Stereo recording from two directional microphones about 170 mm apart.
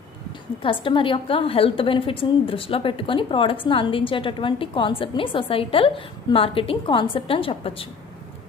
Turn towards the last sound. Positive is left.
turn(degrees=30)  # may be behind; listen again after turning